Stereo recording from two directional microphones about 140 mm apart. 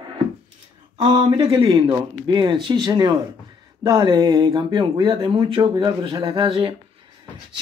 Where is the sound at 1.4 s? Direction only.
25° right (ahead or behind).